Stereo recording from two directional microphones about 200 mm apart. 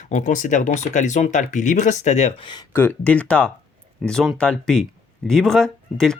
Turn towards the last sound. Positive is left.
turn(degrees=5)  # may be behind; listen again after turning